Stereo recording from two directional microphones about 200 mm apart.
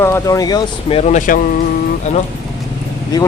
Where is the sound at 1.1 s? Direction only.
40° left (ahead or behind).